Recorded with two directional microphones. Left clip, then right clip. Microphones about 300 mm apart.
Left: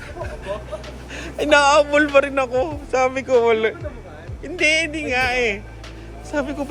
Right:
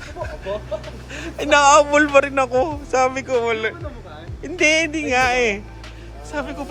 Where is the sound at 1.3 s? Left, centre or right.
Centre.